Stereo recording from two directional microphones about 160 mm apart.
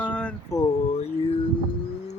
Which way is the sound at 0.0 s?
5° left (ahead or behind).